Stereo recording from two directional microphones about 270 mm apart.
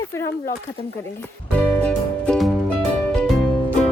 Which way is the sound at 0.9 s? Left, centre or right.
Centre.